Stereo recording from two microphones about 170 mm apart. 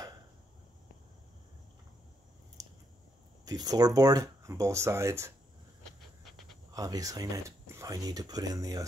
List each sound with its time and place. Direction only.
3.4 s speech: 20° right (ahead or behind)
5.9 s pant: centre (ahead or behind)
6.7 s speech: 20° right (ahead or behind)